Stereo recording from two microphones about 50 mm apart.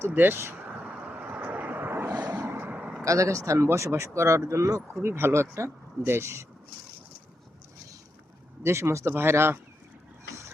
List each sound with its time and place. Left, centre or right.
0.1 s speech: right
1.0 s vehicle: right
2.0 s vehicle: right
2.4 s vehicle: right
3.0 s speech: right
5.0 s speech: right
8.6 s speech: right